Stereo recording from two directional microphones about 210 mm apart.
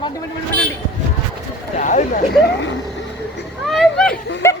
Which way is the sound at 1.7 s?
35° left (ahead or behind).